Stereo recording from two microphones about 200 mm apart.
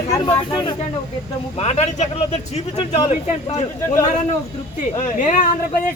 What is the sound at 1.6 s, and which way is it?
Speech, 35° left (ahead or behind).